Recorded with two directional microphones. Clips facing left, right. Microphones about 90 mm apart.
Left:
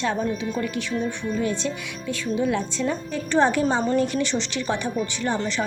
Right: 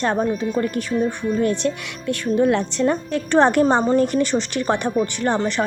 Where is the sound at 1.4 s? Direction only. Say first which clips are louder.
Right 6 dB; 55° right (ahead or behind).